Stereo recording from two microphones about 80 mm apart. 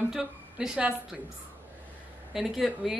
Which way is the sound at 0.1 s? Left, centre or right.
Centre.